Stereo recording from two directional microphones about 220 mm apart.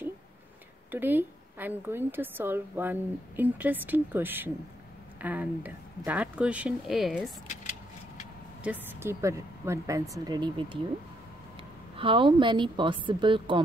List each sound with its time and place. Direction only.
0.9 s a woman's voice: 10° right (ahead or behind)
8.6 s a woman's voice: 10° right (ahead or behind)
12.0 s speech: 25° right (ahead or behind)